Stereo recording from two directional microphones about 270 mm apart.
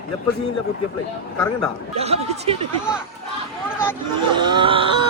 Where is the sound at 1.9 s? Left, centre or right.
Right.